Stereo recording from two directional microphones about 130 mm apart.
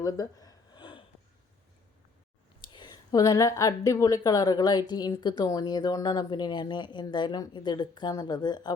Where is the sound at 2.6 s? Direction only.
35° left (ahead or behind).